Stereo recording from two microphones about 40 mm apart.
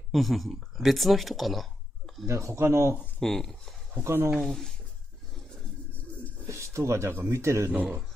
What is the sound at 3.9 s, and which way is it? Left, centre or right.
Speech, right.